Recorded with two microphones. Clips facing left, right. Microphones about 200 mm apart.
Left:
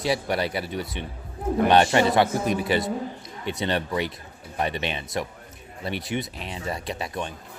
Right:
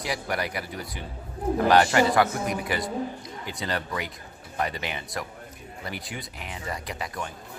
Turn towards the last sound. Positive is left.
turn(degrees=25)  # may be behind; listen again after turning